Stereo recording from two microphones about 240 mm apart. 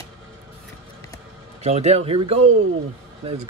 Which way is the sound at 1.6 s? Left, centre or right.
Right.